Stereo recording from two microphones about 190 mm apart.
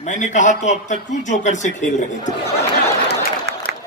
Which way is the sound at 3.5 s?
60° right (ahead or behind).